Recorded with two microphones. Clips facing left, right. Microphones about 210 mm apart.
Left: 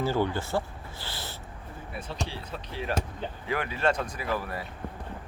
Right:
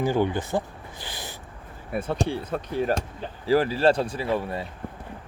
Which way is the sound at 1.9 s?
55° right (ahead or behind).